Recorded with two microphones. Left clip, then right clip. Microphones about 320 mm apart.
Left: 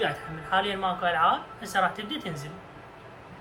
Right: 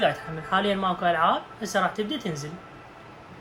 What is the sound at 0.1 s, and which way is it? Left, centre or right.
Speech, centre.